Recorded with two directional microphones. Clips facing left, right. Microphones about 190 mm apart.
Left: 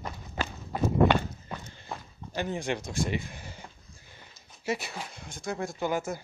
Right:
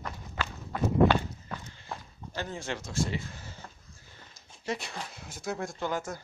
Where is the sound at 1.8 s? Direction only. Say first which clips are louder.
Left 1 dB; 15° left (ahead or behind).